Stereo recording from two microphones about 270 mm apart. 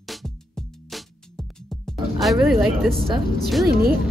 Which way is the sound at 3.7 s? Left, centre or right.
Right.